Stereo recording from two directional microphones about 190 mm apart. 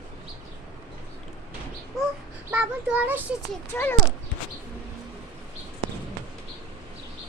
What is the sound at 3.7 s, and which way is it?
Speech, 15° left (ahead or behind).